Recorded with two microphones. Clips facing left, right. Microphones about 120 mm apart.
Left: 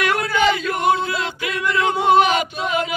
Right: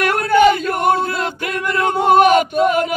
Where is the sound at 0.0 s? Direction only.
50° right (ahead or behind).